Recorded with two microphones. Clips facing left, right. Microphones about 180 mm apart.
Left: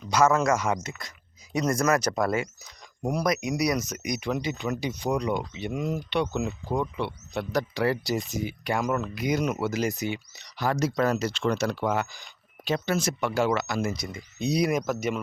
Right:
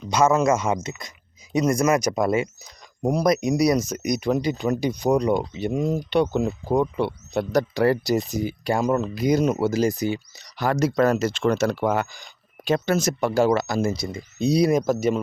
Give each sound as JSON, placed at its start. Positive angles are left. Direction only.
{"t": 0.1, "sound": "speech", "side_deg": -20}
{"t": 3.0, "sound": "speech", "side_deg": -30}
{"t": 10.6, "sound": "speech", "side_deg": -55}